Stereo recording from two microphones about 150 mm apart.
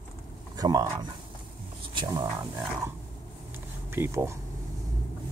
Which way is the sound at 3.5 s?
15° right (ahead or behind).